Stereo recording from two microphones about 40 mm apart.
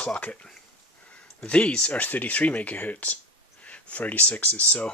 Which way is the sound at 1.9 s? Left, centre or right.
Left.